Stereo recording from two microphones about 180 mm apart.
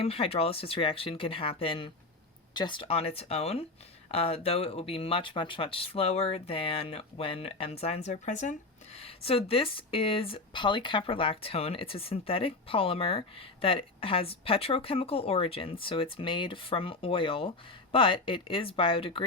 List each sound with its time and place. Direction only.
0.0 s speech: 30° left (ahead or behind)